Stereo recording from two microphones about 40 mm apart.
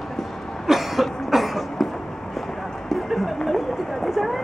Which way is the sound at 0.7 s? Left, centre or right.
Centre.